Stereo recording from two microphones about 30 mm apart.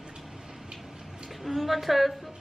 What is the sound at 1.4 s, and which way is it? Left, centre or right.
Speech, centre.